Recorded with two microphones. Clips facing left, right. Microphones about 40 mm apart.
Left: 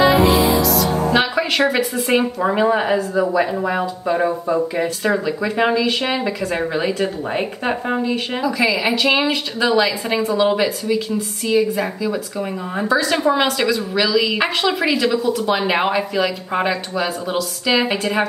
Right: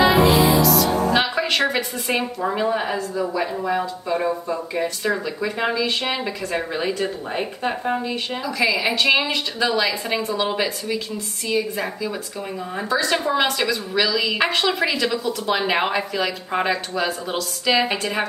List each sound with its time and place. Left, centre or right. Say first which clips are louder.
0.0 s music: left 2 dB; centre
1.7 s a woman's voice: left 5 dB; centre
2.4 s a woman's voice: left 5 dB; left; by 13.2 s centre
13.2 s a woman's voice: left 4 dB; centre
13.6 s a woman's voice: left 3 dB; centre